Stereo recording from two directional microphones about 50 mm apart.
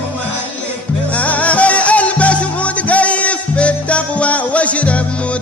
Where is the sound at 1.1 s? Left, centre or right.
Left.